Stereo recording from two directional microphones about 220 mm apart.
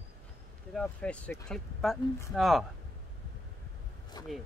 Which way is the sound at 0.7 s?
5° left (ahead or behind).